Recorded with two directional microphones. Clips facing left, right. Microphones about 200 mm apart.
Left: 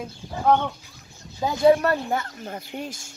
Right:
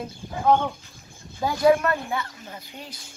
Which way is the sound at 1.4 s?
20° left (ahead or behind).